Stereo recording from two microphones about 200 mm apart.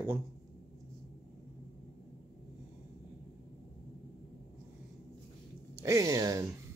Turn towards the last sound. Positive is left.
turn(degrees=-15)  # may be behind; listen again after turning